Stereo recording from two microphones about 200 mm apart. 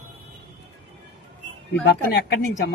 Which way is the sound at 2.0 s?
50° left (ahead or behind).